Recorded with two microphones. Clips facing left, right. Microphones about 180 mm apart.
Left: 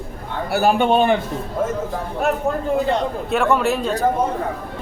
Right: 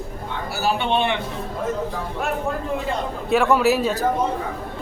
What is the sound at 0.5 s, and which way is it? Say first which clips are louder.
Speech: left 6 dB; 55° left (ahead or behind).